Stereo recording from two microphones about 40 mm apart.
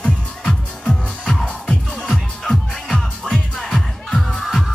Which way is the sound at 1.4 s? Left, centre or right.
Left.